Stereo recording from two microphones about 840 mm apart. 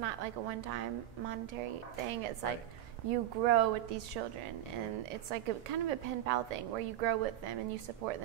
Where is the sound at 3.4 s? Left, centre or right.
Right.